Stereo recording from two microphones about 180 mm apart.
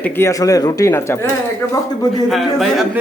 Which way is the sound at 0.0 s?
15° left (ahead or behind).